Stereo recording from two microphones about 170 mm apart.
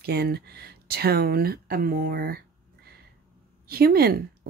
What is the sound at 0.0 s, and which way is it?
Speech, 65° right (ahead or behind).